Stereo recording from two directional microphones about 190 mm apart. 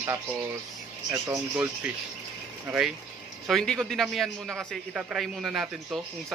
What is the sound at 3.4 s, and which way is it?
A man's voice, centre (ahead or behind).